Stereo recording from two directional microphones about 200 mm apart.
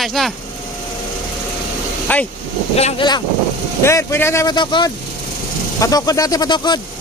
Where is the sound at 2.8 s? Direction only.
30° left (ahead or behind).